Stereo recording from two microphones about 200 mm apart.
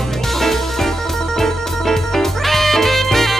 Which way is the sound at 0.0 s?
Centre (ahead or behind).